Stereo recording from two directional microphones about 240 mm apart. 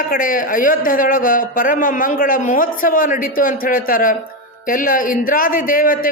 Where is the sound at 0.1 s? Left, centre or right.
Left.